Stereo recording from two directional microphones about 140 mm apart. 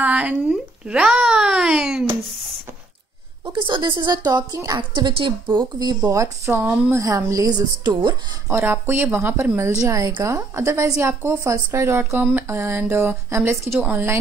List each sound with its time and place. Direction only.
0.0 s a child's voice: 10° right (ahead or behind)
3.5 s a woman's voice: 35° right (ahead or behind)
6.0 s a woman's voice: 20° right (ahead or behind)
8.5 s a woman's voice: 15° right (ahead or behind)